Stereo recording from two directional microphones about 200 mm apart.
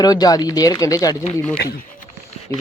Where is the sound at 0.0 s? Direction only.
20° left (ahead or behind).